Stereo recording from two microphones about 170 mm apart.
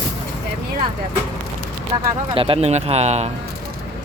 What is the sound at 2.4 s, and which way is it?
Speech, 35° right (ahead or behind).